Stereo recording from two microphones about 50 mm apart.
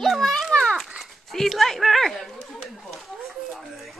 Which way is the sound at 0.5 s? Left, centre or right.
Left.